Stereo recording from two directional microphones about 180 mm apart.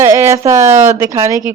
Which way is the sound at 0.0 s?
15° right (ahead or behind).